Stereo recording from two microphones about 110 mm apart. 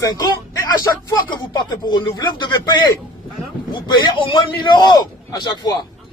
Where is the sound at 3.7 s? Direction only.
45° left (ahead or behind).